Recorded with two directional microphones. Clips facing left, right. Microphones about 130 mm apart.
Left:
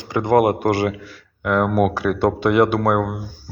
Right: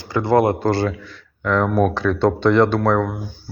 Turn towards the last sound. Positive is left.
turn(degrees=15)  # may be behind; listen again after turning